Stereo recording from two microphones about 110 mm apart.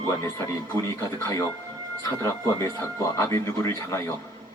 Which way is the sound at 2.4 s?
25° left (ahead or behind).